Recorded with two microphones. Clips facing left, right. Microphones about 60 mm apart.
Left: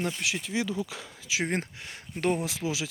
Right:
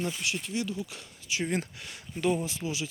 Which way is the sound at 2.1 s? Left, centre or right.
Left.